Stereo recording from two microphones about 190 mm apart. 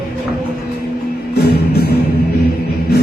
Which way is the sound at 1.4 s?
55° left (ahead or behind).